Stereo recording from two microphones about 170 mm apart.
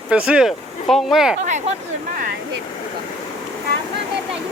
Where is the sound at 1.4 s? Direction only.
45° right (ahead or behind).